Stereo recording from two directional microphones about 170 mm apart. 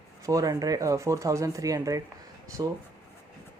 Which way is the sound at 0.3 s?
20° right (ahead or behind).